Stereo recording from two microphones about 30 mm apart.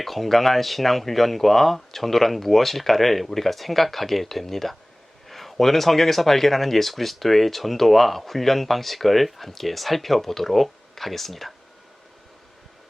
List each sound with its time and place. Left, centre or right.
0.0 s speech: centre